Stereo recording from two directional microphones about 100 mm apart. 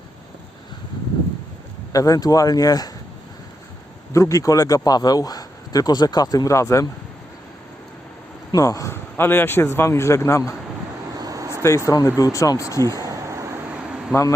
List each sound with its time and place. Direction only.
1.9 s a man's voice: 35° left (ahead or behind)
4.1 s a man's voice: 30° left (ahead or behind)
8.5 s a man's voice: 35° left (ahead or behind)
11.2 s vehicle: 35° right (ahead or behind)
11.9 s a man's voice: 35° left (ahead or behind)
13.0 s vehicle: 30° right (ahead or behind)